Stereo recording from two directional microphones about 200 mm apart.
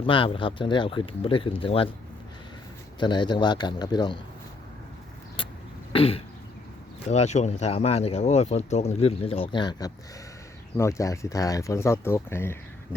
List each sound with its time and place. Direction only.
0.0 s speech: 25° left (ahead or behind)
3.0 s speech: 20° left (ahead or behind)
5.4 s vehicle: 25° left (ahead or behind)
5.9 s speech: 30° left (ahead or behind); by 13.0 s 10° left (ahead or behind)